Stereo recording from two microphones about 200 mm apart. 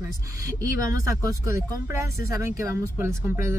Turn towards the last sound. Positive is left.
turn(degrees=-15)  # may be behind; listen again after turning